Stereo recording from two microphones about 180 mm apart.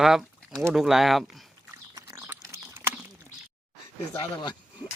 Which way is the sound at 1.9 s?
15° right (ahead or behind).